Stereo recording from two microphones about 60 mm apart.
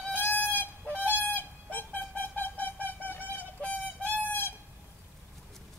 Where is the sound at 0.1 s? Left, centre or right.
Left.